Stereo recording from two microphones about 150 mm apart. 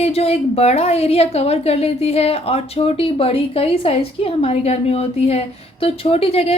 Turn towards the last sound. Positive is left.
turn(degrees=40)  # may be behind; listen again after turning